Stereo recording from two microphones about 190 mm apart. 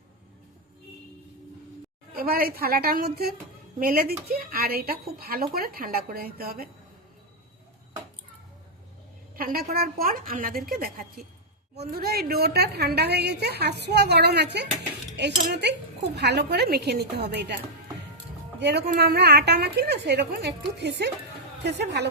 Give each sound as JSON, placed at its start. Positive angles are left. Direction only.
{"t": 2.1, "sound": "speech", "side_deg": -50}
{"t": 9.3, "sound": "a woman's voice", "side_deg": -50}
{"t": 18.6, "sound": "a woman's voice", "side_deg": -60}